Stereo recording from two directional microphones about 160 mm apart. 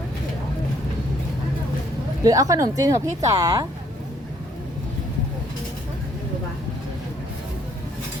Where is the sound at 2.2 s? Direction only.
20° right (ahead or behind).